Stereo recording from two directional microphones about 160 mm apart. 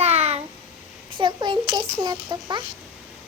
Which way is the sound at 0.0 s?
40° right (ahead or behind).